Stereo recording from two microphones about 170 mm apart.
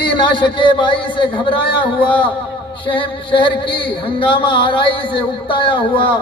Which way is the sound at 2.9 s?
30° left (ahead or behind).